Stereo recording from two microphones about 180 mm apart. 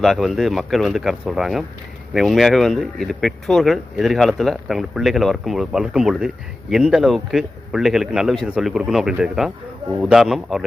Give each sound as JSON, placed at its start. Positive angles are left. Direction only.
{"t": 0.0, "sound": "speech", "side_deg": 0}